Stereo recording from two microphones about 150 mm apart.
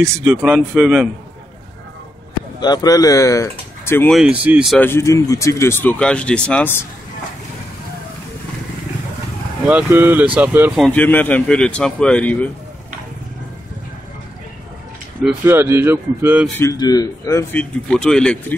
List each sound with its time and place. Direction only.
0.2 s a man's voice: 5° right (ahead or behind)
2.6 s speech: 25° left (ahead or behind)
4.1 s speech: 5° right (ahead or behind)
4.7 s speech: 15° left (ahead or behind)
9.7 s speech: 15° right (ahead or behind)
10.8 s speech: 10° left (ahead or behind)
15.4 s speech: 15° right (ahead or behind)
16.7 s speech: 25° left (ahead or behind); by 18.4 s 5° left (ahead or behind)